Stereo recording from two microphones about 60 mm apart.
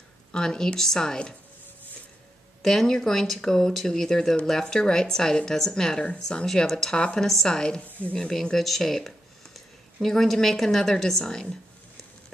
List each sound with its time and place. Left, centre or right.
0.3 s speech: centre
2.6 s speech: centre
7.8 s speech: left
8.2 s speech: centre